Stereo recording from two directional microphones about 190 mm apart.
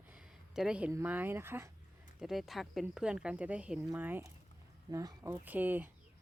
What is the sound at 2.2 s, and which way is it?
A woman's voice, centre (ahead or behind).